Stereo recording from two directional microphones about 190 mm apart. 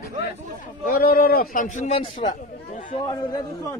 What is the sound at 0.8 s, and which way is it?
Speech, 50° left (ahead or behind).